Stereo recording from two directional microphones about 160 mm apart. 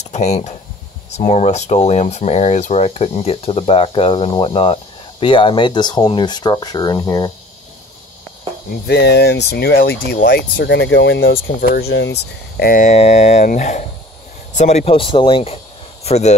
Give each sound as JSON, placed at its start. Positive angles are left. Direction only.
{"t": 0.0, "sound": "speech", "side_deg": 45}
{"t": 8.8, "sound": "speech", "side_deg": 90}
{"t": 10.1, "sound": "speech", "side_deg": 65}
{"t": 12.9, "sound": "speech", "side_deg": 45}
{"t": 16.0, "sound": "speech", "side_deg": 45}